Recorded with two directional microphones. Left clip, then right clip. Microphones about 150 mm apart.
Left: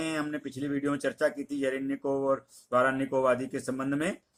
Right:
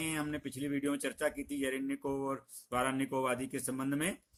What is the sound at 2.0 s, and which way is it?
Speech, 30° right (ahead or behind).